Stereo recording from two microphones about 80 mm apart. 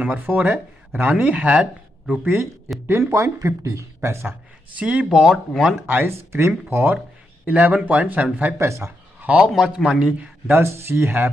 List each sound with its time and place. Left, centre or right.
0.0 s speech: right
2.9 s speech: right
4.7 s speech: centre
5.9 s speech: right
8.5 s speech: right
9.2 s a man's voice: centre
10.4 s speech: right